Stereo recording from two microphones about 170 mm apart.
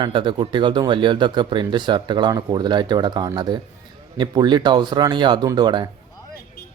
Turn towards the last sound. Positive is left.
turn(degrees=-25)  # may be behind; listen again after turning